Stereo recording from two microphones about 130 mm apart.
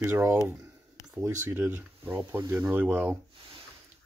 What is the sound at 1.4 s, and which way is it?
Speech, 15° right (ahead or behind).